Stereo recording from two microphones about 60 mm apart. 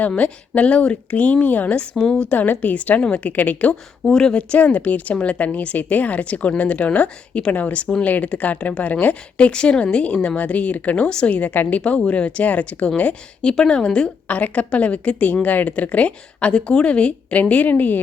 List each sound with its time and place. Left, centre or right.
0.2 s a woman's voice: left
2.0 s speech: centre
2.3 s a woman's voice: left
4.0 s a woman's voice: centre; by 18.0 s left